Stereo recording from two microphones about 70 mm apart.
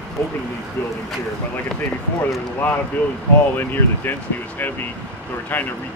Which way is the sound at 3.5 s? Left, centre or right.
Left.